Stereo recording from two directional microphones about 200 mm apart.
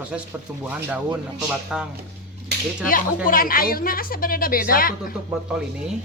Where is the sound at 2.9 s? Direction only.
45° left (ahead or behind).